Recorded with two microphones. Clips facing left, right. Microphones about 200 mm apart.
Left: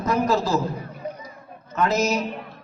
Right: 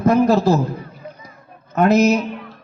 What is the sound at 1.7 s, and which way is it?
Speech, 60° right (ahead or behind).